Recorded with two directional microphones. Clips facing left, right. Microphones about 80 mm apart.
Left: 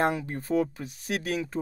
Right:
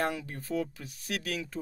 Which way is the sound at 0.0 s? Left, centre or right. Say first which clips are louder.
Left 6 dB; left.